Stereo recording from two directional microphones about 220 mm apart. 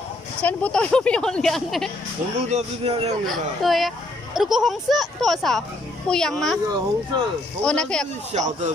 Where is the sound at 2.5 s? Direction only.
25° right (ahead or behind).